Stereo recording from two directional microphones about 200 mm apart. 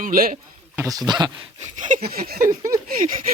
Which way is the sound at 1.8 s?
40° right (ahead or behind).